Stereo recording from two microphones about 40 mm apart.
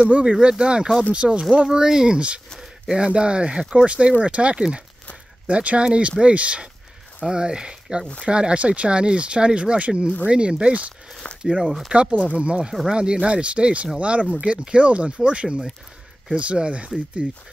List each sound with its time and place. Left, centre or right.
0.0 s speech: right
1.7 s speech: centre
2.1 s speech: right
11.3 s a sound: left
11.6 s speech: centre
11.9 s speech: right